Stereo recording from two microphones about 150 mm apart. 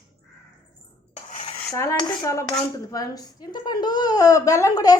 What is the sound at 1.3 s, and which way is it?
Cutlery, 45° left (ahead or behind).